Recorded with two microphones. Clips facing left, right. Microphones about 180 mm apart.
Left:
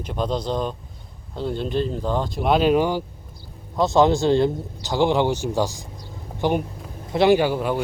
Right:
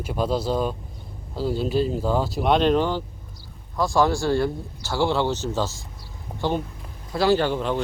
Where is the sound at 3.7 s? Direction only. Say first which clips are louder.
Left 4 dB; 20° left (ahead or behind).